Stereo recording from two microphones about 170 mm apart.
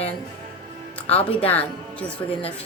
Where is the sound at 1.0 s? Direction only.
35° left (ahead or behind).